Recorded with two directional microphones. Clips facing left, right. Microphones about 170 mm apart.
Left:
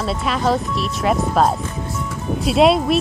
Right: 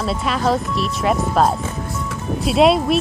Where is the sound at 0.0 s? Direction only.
Centre (ahead or behind).